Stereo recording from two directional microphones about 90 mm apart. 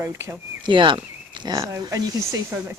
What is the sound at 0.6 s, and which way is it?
Speech, 65° right (ahead or behind).